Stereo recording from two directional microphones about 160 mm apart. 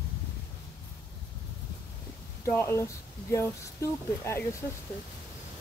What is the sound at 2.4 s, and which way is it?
Speech, 15° left (ahead or behind).